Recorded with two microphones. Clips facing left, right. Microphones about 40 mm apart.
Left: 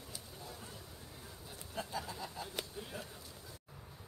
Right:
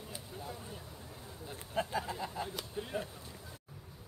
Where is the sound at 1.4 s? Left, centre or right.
Right.